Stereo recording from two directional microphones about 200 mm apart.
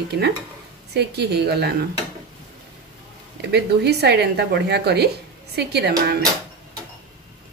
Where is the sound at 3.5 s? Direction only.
55° right (ahead or behind).